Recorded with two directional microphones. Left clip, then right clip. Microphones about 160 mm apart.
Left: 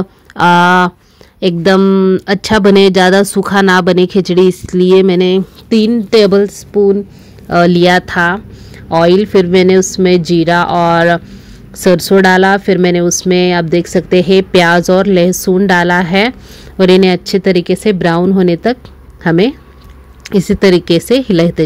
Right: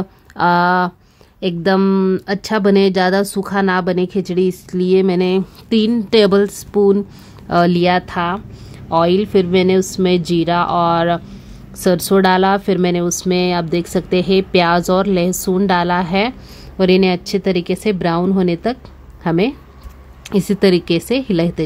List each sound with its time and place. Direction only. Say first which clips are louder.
0.0 s speech: left 6 dB; 20° left (ahead or behind)
1.8 s speech: left 6 dB; 10° left (ahead or behind)
2.2 s speech: left 7 dB; 30° left (ahead or behind); by 6.5 s 5° left (ahead or behind)
6.7 s speech: left 3 dB; 10° right (ahead or behind)
7.4 s speech: left 5 dB; 5° left (ahead or behind)
7.7 s speech: left 6 dB; 25° left (ahead or behind)